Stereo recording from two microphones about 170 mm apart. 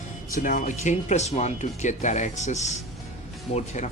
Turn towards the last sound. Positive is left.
turn(degrees=40)  # may be behind; listen again after turning